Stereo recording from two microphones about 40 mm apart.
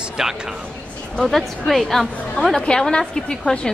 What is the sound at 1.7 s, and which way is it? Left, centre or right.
Speech, centre.